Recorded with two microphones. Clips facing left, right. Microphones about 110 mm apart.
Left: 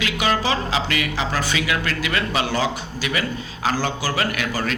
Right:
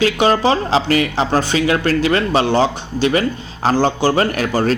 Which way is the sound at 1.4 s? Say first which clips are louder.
Right 8 dB; 30° right (ahead or behind).